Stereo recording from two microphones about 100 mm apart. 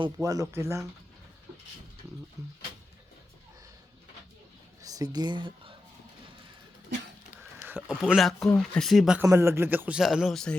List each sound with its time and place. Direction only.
0.2 s speech: 35° right (ahead or behind)
4.8 s speech: 35° right (ahead or behind); by 5.7 s 55° right (ahead or behind)
7.9 s speech: 5° right (ahead or behind)
9.2 s speech: 30° right (ahead or behind)
10.0 s speech: 5° right (ahead or behind)